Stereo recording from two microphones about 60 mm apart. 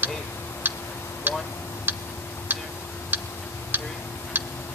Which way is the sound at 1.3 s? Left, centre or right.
Right.